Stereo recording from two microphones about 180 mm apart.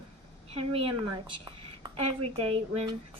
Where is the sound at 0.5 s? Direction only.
30° right (ahead or behind).